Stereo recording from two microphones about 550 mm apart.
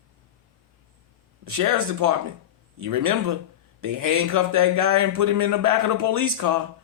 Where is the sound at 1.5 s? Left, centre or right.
Right.